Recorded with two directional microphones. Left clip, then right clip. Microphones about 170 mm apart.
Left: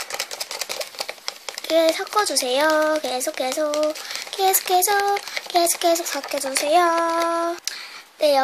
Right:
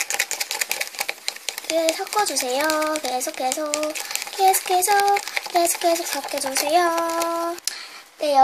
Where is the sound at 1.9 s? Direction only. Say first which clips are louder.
Left 1 dB; 15° left (ahead or behind).